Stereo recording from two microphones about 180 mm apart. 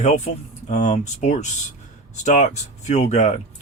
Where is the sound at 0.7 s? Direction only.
40° left (ahead or behind).